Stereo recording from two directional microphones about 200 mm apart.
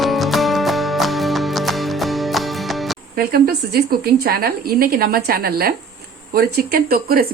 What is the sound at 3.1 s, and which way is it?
A woman's voice, 50° right (ahead or behind).